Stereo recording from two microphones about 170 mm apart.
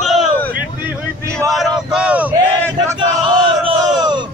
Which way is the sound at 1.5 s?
Centre (ahead or behind).